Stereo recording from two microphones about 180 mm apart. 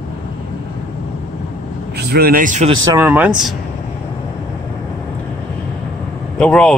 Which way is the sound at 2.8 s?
20° right (ahead or behind).